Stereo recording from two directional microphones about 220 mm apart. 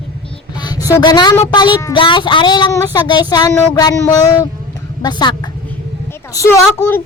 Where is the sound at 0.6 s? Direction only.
15° left (ahead or behind).